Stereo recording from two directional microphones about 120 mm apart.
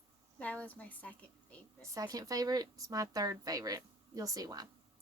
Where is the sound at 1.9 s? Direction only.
30° right (ahead or behind).